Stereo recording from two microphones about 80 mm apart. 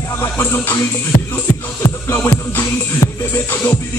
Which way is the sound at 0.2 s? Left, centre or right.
Left.